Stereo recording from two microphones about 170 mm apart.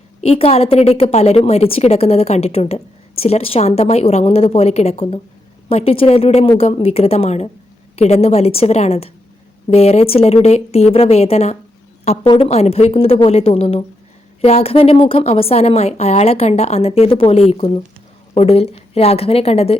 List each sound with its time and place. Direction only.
0.2 s a woman's voice: 35° left (ahead or behind)